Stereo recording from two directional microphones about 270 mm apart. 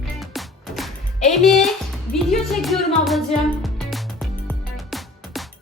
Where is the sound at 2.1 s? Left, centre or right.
Centre.